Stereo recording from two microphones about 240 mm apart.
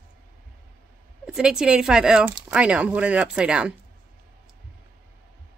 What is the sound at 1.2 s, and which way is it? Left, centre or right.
Speech, centre.